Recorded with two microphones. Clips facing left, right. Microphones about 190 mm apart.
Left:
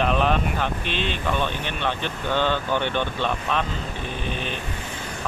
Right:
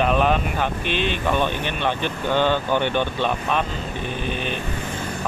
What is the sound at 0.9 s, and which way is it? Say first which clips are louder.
Speech: right 4 dB; 55° right (ahead or behind).